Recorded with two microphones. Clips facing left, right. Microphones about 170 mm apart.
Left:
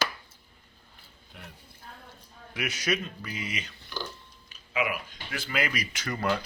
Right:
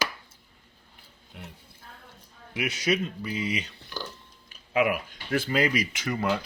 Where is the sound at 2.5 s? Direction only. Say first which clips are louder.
Right 3 dB; 25° right (ahead or behind).